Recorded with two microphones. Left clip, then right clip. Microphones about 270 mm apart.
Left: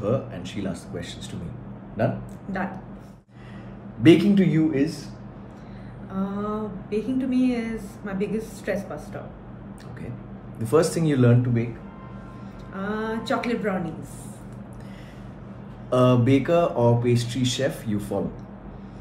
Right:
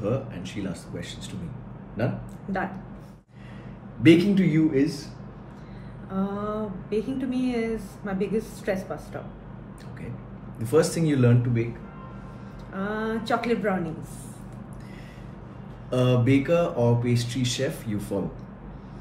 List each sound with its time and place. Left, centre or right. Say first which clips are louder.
0.3 s speech: left 2 dB; centre
4.0 s speech: left 2 dB; centre
6.1 s speech: even; centre
10.7 s speech: left 1 dB; centre
12.7 s speech: even; centre
15.9 s speech: left 4 dB; centre